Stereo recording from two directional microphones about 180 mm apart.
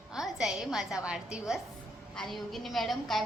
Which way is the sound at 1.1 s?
5° right (ahead or behind).